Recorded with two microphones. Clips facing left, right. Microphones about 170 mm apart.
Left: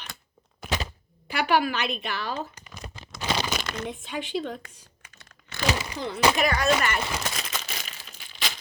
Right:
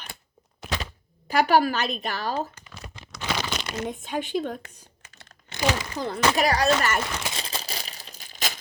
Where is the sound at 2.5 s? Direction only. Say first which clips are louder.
Left 1 dB; 15° left (ahead or behind).